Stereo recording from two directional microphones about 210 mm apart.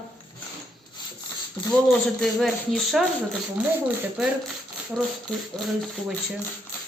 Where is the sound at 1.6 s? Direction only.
15° left (ahead or behind).